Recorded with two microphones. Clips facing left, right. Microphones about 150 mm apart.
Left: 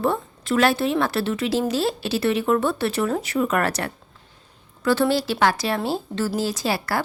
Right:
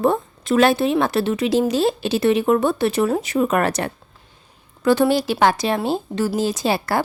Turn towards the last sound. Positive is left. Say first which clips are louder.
# right 4 dB
turn(degrees=-20)  # may be behind; listen again after turning